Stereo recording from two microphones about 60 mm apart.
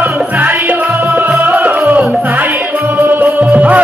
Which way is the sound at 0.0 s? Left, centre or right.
Right.